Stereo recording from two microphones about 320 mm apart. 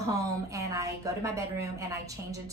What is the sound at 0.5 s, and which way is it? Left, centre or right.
A woman's voice, centre.